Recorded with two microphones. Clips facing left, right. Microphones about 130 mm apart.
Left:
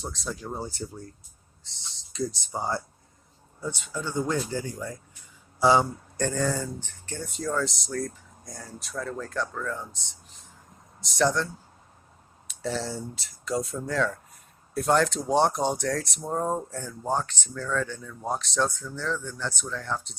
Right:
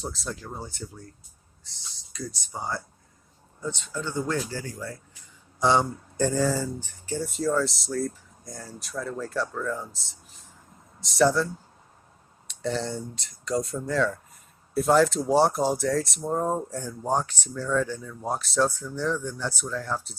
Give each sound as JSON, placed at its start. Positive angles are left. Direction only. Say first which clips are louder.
{"t": 0.0, "sound": "speech", "louder": "right 1 dB", "side_deg": 0}
{"t": 0.4, "sound": "speech", "louder": "left 4 dB", "side_deg": 30}
{"t": 2.1, "sound": "speech", "louder": "left 5 dB", "side_deg": 25}
{"t": 3.6, "sound": "speech", "louder": "right 1 dB", "side_deg": 10}
{"t": 5.5, "sound": "a man's voice", "louder": "left 1 dB", "side_deg": 5}
{"t": 6.1, "sound": "speech", "louder": "right 3 dB", "side_deg": -10}
{"t": 12.5, "sound": "speech", "louder": "right 2 dB", "side_deg": 0}